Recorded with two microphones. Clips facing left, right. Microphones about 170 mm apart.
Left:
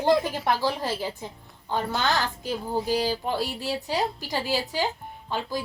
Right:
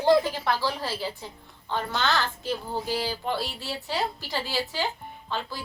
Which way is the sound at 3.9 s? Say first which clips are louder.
Even; 15° left (ahead or behind).